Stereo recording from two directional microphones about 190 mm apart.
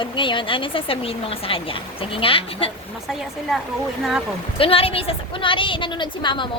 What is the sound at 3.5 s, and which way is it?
Speech, centre (ahead or behind).